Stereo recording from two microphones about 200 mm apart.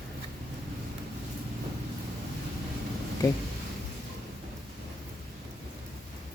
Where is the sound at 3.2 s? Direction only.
15° left (ahead or behind).